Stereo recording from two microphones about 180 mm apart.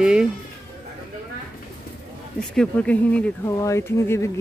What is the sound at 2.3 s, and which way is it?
Speech, 5° left (ahead or behind).